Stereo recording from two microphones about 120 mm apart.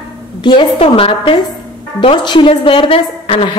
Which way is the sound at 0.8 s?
55° left (ahead or behind).